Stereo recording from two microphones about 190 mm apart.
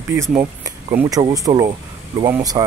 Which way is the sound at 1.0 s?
20° right (ahead or behind).